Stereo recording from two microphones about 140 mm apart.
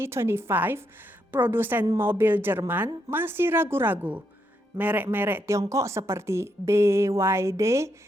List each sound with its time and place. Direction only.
0.0 s a woman's voice: 20° right (ahead or behind)